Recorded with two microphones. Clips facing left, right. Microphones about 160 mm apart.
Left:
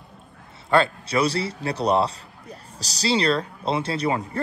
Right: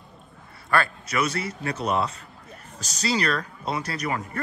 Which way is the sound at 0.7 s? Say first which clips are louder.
Left 5 dB; 25° left (ahead or behind).